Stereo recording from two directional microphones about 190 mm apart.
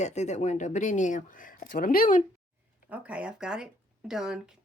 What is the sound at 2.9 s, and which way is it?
Speech, 5° right (ahead or behind).